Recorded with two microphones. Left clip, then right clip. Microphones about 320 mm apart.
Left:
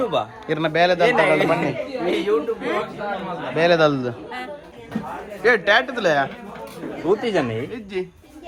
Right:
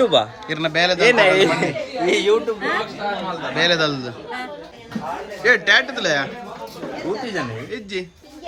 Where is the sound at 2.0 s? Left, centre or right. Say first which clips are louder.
Right 4 dB; centre.